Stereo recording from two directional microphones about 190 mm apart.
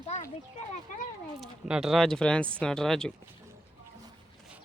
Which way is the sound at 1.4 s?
5° right (ahead or behind).